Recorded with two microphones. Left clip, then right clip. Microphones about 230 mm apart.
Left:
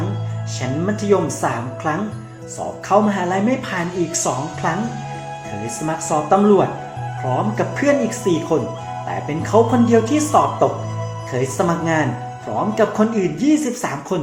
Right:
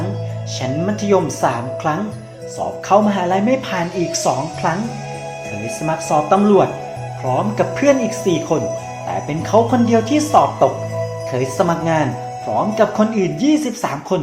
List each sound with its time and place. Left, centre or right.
1.1 s speech: centre
2.9 s speech: centre
6.1 s speech: centre